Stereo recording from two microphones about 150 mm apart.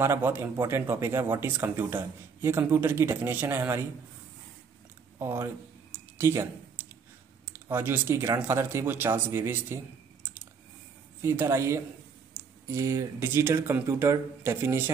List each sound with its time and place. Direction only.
0.0 s speech: 15° right (ahead or behind)
5.2 s speech: 15° right (ahead or behind)
6.1 s a sound: 15° right (ahead or behind)
7.4 s speech: 15° right (ahead or behind)
11.1 s speech: 15° right (ahead or behind)